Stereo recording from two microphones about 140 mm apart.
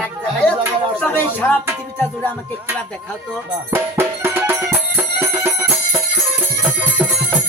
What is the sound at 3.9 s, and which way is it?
Music, 15° right (ahead or behind).